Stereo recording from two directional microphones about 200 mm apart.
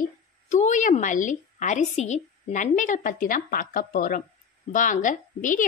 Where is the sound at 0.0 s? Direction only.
40° left (ahead or behind).